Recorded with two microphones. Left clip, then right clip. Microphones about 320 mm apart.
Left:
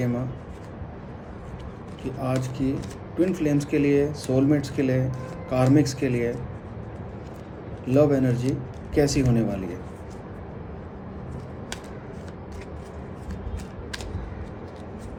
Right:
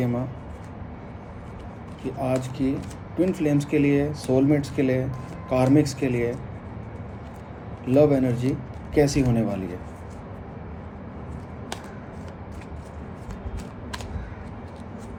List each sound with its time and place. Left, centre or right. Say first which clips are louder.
2.0 s speech: right 2 dB; centre
7.9 s speech: right 1 dB; centre